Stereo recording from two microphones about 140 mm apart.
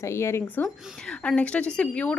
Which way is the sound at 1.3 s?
10° left (ahead or behind).